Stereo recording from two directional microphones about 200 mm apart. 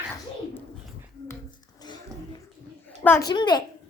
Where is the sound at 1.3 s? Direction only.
20° left (ahead or behind).